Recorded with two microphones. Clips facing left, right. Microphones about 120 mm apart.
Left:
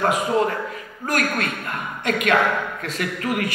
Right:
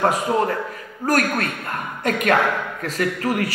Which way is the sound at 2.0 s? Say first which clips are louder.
Right 1 dB; 40° right (ahead or behind).